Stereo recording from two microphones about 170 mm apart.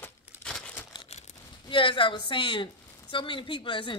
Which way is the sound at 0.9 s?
35° left (ahead or behind).